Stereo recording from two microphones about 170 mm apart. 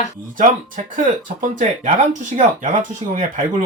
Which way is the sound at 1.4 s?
50° right (ahead or behind).